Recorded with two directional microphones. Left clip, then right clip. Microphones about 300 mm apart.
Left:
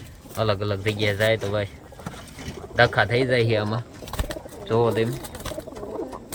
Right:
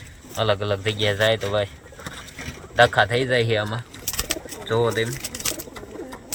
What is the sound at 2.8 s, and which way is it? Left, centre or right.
Speech, centre.